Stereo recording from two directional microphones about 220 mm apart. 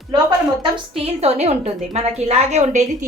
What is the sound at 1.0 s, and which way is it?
A woman's voice, 30° right (ahead or behind).